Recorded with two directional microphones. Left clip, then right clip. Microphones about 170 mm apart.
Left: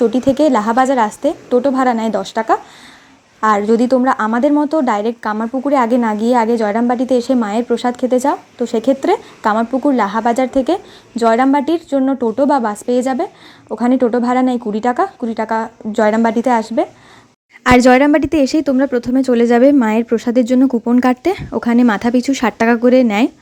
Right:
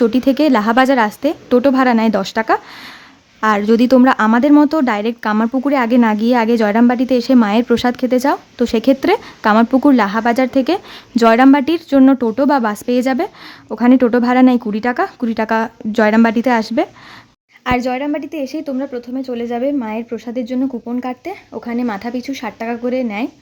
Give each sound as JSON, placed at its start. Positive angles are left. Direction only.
{"t": 0.0, "sound": "a woman's voice", "side_deg": -5}
{"t": 11.2, "sound": "a woman's voice", "side_deg": -15}
{"t": 17.6, "sound": "a woman's voice", "side_deg": 35}